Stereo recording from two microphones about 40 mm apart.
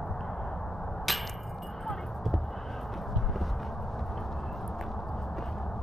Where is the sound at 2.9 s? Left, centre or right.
Centre.